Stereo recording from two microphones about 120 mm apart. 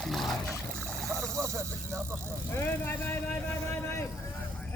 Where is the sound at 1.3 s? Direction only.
25° right (ahead or behind).